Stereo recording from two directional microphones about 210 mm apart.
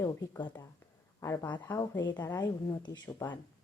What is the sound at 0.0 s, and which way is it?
Speech, 20° left (ahead or behind).